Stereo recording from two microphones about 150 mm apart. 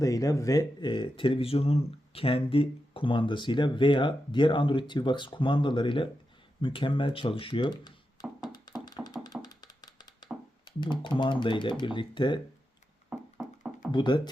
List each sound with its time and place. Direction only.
0.0 s speech: 20° left (ahead or behind)
8.5 s music: 25° left (ahead or behind)
10.7 s speech: 30° left (ahead or behind)
13.1 s music: 5° right (ahead or behind)
13.9 s speech: 30° left (ahead or behind)